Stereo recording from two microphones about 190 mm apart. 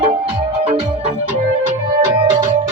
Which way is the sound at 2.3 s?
40° right (ahead or behind).